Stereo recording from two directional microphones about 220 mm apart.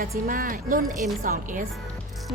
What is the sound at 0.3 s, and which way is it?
Music, 40° right (ahead or behind).